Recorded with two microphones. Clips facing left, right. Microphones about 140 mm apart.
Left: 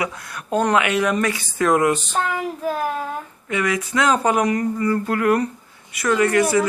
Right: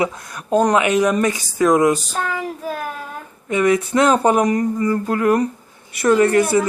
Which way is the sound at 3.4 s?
25° right (ahead or behind).